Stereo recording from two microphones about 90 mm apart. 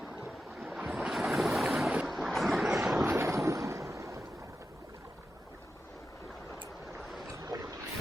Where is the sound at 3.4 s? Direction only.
35° right (ahead or behind).